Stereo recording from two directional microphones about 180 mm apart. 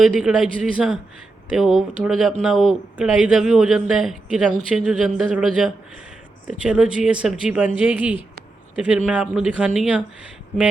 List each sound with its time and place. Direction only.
0.0 s speech: 5° right (ahead or behind)